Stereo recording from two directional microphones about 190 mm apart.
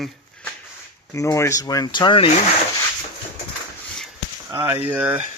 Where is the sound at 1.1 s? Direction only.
15° left (ahead or behind).